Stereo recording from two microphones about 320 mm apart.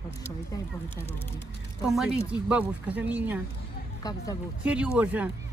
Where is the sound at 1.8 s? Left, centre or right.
Centre.